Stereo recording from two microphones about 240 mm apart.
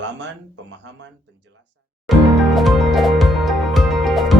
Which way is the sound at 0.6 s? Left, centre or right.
Right.